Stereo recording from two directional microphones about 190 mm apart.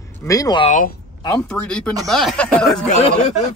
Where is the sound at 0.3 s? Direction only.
20° left (ahead or behind).